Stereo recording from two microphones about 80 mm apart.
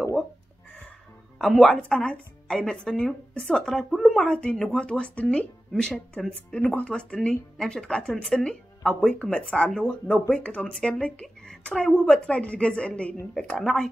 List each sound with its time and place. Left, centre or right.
1.4 s speech: centre; by 6.9 s left
6.9 s speech: centre